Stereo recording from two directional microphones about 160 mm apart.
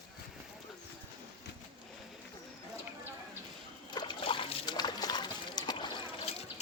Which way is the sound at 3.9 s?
30° left (ahead or behind).